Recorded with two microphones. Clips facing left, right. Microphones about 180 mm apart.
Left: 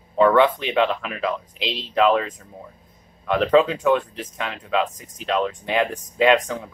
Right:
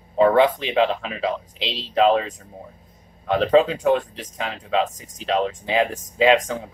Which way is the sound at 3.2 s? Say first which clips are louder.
Even; 30° right (ahead or behind).